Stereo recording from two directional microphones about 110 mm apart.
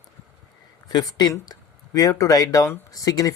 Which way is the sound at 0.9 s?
35° left (ahead or behind).